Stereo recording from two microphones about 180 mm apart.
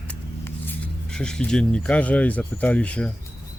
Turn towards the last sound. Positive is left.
turn(degrees=5)  # may be behind; listen again after turning